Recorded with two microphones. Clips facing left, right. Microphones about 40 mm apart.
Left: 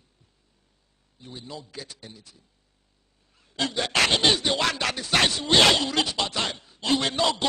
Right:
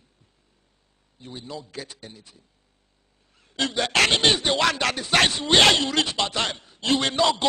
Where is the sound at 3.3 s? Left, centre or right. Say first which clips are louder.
Right 2 dB; centre.